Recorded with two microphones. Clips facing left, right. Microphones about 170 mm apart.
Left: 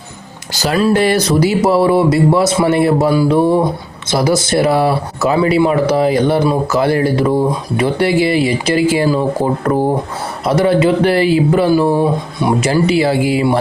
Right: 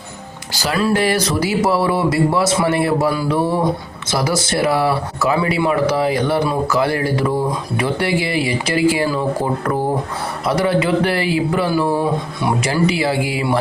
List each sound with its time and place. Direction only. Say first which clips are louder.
0.6 s speech: left 4 dB; 25° left (ahead or behind)
10.4 s speech: left 5 dB; 25° left (ahead or behind)